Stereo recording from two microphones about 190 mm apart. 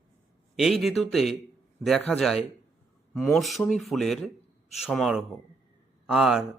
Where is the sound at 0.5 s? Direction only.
Centre (ahead or behind).